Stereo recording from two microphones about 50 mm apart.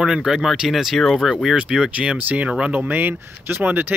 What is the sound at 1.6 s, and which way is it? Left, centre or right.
Speech, right.